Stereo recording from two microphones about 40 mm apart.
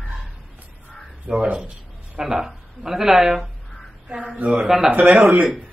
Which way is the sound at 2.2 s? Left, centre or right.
Centre.